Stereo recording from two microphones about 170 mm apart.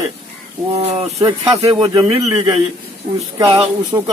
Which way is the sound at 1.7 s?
20° right (ahead or behind).